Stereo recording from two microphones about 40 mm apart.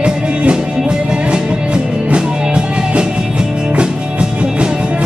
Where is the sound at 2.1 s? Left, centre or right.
Right.